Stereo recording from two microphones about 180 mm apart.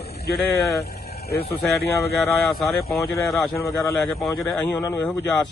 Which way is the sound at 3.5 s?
15° left (ahead or behind).